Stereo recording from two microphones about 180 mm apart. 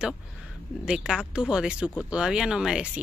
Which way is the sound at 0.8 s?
5° right (ahead or behind).